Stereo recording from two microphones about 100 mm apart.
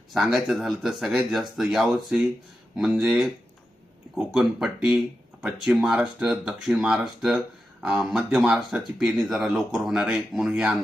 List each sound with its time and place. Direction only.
0.1 s speech: centre (ahead or behind)